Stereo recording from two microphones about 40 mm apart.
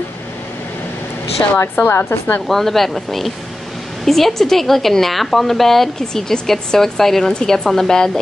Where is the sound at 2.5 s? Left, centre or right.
Centre.